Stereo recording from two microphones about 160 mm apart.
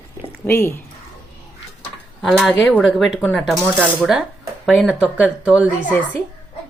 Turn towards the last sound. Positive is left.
turn(degrees=10)  # may be behind; listen again after turning